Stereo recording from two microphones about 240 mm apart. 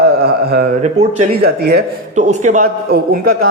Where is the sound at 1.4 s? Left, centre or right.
Right.